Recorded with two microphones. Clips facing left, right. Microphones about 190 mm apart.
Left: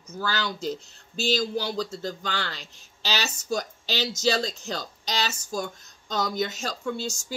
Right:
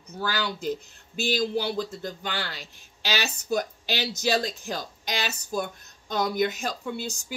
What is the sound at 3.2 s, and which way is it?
Speech, 60° right (ahead or behind).